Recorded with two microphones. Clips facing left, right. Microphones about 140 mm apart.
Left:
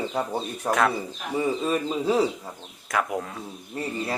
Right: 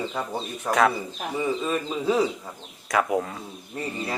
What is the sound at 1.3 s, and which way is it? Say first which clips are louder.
Speech: left 2 dB; 15° left (ahead or behind).